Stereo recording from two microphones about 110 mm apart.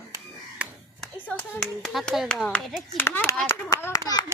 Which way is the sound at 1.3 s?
10° left (ahead or behind).